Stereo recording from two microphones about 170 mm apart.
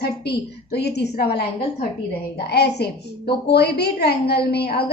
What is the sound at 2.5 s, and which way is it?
A woman's voice, 75° left (ahead or behind).